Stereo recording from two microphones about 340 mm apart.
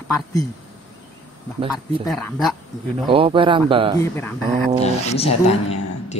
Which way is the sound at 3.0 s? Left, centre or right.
Centre.